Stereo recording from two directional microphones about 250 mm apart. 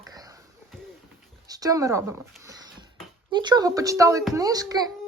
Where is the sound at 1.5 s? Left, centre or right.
Centre.